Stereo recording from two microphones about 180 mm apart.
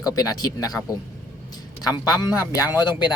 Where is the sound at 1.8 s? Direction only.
20° left (ahead or behind).